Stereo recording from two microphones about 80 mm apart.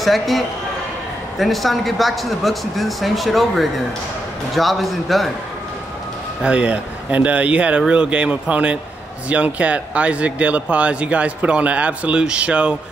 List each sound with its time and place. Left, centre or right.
0.0 s speech: centre
1.4 s speech: centre
6.4 s speech: centre